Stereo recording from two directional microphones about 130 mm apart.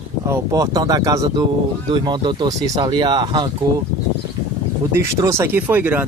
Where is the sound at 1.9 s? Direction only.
35° right (ahead or behind).